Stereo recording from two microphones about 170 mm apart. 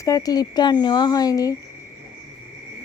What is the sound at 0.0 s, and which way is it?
Speech, 20° left (ahead or behind).